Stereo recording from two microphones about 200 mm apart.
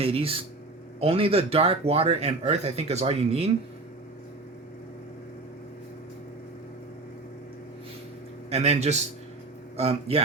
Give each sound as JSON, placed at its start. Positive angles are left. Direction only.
{"t": 0.0, "sound": "speech", "side_deg": -30}
{"t": 8.4, "sound": "speech", "side_deg": -30}